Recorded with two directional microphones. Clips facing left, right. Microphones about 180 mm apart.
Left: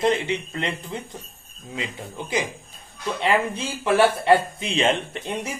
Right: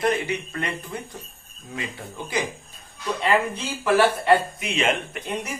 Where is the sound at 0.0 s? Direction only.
25° left (ahead or behind).